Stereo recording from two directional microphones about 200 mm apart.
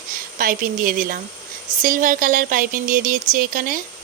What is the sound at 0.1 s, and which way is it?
A woman's voice, 45° right (ahead or behind).